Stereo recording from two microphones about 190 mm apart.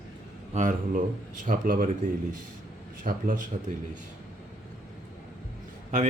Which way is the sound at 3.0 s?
45° right (ahead or behind).